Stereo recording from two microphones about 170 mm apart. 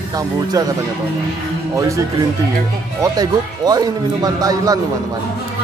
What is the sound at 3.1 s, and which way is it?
Speech, 20° right (ahead or behind).